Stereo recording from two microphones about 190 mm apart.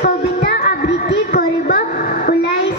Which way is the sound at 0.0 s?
55° left (ahead or behind).